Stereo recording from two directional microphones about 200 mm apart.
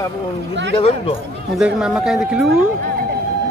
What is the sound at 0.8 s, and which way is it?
Speech, 30° left (ahead or behind).